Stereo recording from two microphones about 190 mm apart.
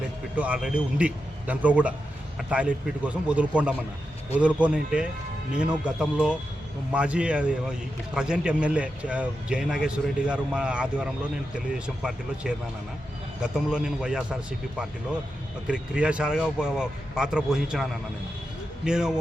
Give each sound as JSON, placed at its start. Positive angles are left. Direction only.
{"t": 0.3, "sound": "a man's voice", "side_deg": -5}
{"t": 15.6, "sound": "a man's voice", "side_deg": -5}
{"t": 18.9, "sound": "a man's voice", "side_deg": -5}